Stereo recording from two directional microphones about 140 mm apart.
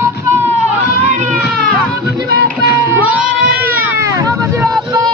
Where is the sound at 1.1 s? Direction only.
60° right (ahead or behind).